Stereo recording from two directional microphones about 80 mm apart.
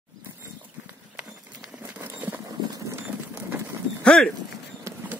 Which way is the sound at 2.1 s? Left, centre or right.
Right.